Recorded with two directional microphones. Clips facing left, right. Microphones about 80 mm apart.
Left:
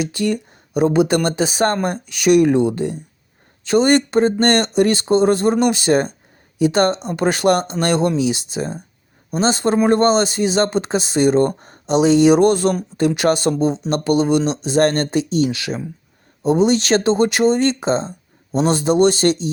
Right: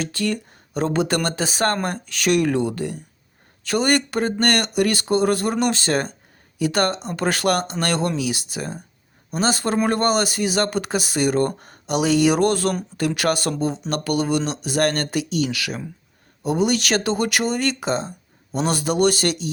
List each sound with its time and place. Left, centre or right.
0.0 s speech: centre